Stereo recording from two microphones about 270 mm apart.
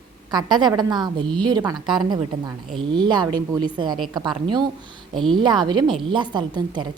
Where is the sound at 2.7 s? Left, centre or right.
Centre.